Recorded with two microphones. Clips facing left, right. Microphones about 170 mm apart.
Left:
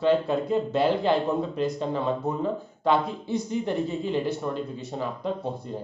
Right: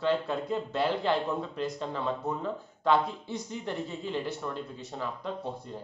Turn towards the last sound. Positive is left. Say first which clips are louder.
# left 6 dB
turn(degrees=15)  # may be behind; listen again after turning